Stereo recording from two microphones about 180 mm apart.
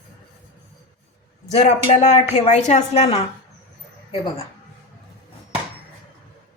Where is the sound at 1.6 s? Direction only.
40° left (ahead or behind).